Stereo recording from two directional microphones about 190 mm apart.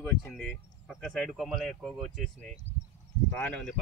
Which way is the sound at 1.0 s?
Centre (ahead or behind).